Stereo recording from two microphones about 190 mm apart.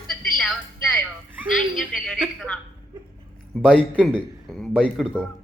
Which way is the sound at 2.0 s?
Centre (ahead or behind).